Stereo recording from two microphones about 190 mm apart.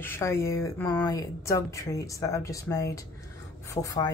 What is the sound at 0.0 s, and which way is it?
A woman's voice, 15° left (ahead or behind).